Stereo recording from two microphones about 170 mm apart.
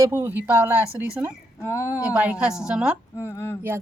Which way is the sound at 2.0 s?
5° right (ahead or behind).